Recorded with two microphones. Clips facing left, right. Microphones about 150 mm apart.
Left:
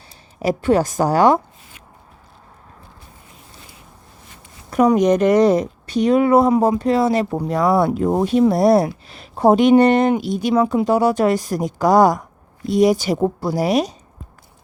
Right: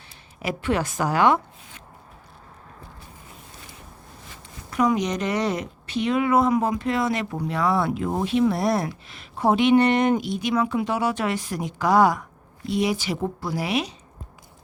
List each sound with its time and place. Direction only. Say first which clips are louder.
0.3 s a woman's voice: left 8 dB; 40° left (ahead or behind)
4.7 s a woman's voice: left 8 dB; 45° left (ahead or behind)